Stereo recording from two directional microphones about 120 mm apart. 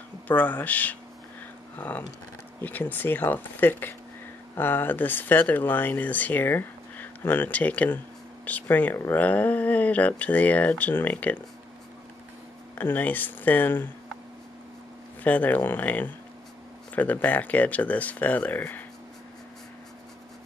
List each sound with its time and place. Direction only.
0.3 s speech: 15° left (ahead or behind)
12.7 s speech: 15° left (ahead or behind)
15.2 s speech: 15° left (ahead or behind)